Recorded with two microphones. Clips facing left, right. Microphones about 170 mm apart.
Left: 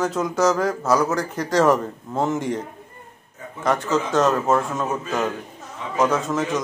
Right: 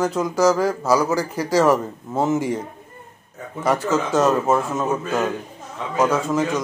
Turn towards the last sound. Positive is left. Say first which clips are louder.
# right 2 dB
turn(degrees=0)  # may be behind; listen again after turning